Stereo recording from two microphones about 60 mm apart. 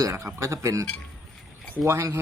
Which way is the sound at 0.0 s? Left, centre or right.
Right.